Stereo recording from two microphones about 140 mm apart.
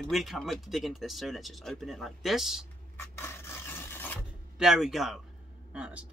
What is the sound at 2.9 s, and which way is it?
Filing, 15° left (ahead or behind).